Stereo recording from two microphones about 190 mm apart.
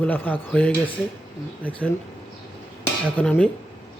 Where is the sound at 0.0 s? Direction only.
10° left (ahead or behind).